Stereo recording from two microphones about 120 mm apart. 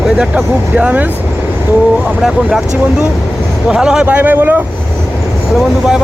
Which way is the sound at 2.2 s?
5° right (ahead or behind).